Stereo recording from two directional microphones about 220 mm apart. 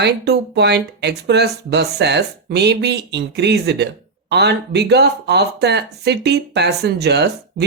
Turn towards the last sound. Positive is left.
turn(degrees=-50)  # may be behind; listen again after turning